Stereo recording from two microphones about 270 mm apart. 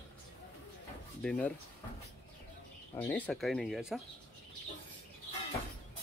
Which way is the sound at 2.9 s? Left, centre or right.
Centre.